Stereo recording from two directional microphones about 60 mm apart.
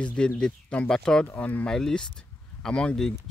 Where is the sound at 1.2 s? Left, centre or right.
Left.